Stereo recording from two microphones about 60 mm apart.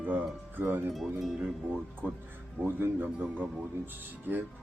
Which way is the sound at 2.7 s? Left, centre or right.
Right.